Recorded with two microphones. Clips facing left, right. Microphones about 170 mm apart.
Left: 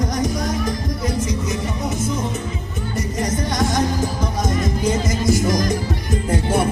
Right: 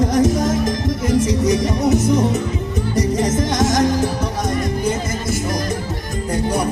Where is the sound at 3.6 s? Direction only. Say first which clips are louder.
Right 4 dB; 90° right.